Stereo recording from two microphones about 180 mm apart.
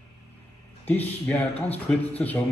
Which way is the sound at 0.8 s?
10° left (ahead or behind).